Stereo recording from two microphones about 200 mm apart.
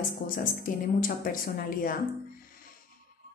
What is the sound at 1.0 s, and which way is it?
Speech, 45° left (ahead or behind).